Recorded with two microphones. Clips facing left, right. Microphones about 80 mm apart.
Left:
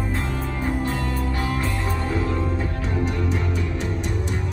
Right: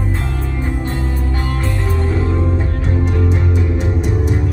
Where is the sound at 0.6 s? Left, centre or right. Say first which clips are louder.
Right 1 dB; centre.